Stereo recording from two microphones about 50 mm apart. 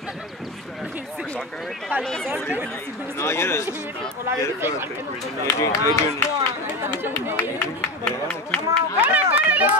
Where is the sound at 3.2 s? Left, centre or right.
Left.